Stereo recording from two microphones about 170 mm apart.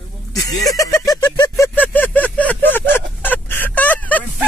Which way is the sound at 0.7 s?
20° left (ahead or behind).